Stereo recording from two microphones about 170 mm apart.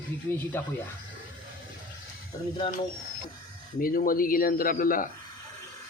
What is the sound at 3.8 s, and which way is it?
Speech, 55° left (ahead or behind).